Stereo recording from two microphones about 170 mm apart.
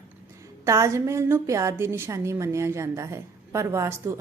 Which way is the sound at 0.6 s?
15° right (ahead or behind).